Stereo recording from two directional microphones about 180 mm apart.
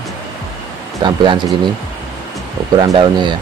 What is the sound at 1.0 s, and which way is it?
Speech, 25° right (ahead or behind).